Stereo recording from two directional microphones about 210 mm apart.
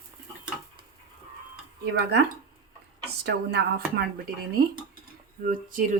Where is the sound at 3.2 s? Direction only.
50° right (ahead or behind).